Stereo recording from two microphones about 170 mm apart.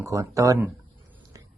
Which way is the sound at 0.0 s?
20° right (ahead or behind).